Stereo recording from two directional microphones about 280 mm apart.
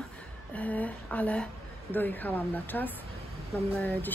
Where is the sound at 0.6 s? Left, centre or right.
Centre.